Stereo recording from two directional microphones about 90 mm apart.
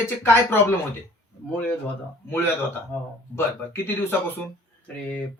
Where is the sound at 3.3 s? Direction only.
25° left (ahead or behind).